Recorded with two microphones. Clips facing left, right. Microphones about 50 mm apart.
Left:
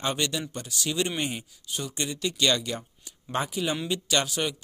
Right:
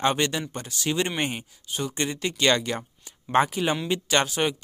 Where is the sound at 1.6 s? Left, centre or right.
Right.